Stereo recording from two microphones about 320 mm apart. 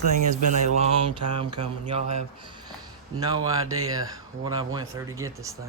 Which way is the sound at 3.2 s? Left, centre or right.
Centre.